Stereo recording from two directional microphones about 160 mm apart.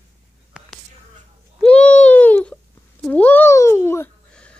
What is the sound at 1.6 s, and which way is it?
Baby cry, 10° left (ahead or behind).